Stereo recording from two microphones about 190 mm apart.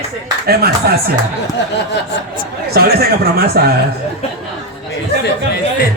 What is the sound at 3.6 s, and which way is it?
Speech, 55° right (ahead or behind).